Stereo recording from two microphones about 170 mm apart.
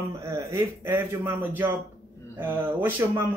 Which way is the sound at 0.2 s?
15° right (ahead or behind).